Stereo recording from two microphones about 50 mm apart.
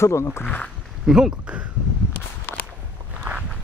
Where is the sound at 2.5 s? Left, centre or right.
Left.